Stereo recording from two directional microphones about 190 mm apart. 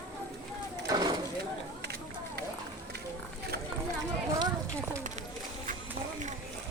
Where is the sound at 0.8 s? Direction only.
20° right (ahead or behind).